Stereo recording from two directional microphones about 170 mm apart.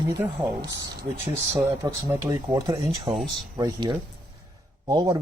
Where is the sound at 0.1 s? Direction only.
25° right (ahead or behind).